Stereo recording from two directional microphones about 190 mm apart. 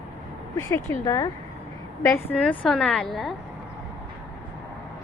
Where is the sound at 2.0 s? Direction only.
10° left (ahead or behind).